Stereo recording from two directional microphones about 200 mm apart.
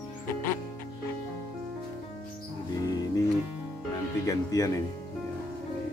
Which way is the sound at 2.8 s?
20° left (ahead or behind).